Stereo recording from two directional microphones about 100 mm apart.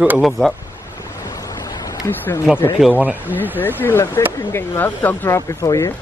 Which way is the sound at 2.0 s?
20° left (ahead or behind).